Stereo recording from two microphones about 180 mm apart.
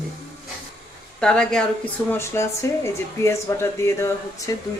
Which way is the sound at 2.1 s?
15° left (ahead or behind).